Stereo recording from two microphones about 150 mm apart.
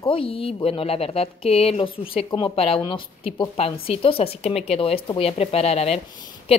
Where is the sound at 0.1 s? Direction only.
40° left (ahead or behind).